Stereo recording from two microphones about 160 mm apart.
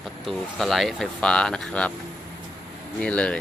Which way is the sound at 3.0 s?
5° left (ahead or behind).